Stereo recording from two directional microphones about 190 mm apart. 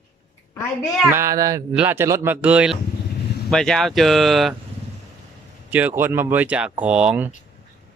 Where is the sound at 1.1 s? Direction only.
15° right (ahead or behind).